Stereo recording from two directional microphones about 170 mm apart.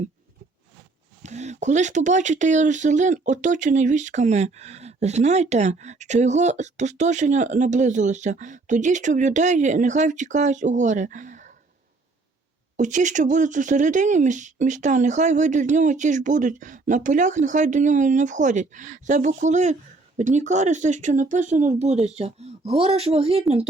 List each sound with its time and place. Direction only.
1.2 s speech: 40° right (ahead or behind)
12.7 s speech: 45° right (ahead or behind)